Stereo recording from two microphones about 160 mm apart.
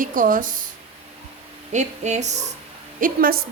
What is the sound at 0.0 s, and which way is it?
Speech, 55° right (ahead or behind).